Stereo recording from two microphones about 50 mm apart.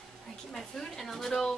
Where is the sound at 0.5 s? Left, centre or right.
Centre.